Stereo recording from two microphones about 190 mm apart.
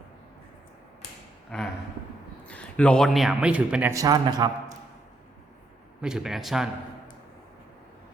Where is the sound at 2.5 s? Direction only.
5° left (ahead or behind).